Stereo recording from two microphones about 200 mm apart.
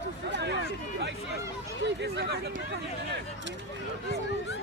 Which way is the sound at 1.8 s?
60° right (ahead or behind).